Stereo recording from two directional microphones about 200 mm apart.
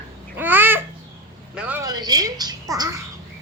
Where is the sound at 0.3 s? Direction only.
10° right (ahead or behind).